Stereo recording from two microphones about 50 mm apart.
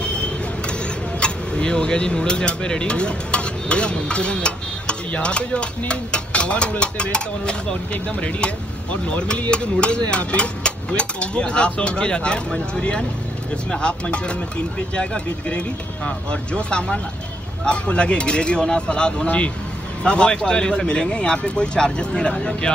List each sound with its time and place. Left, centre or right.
1.2 s speech: centre